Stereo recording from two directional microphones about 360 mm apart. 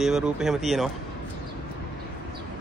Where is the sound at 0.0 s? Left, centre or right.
Centre.